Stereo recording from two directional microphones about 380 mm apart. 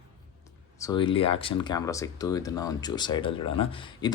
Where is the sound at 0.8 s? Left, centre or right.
Centre.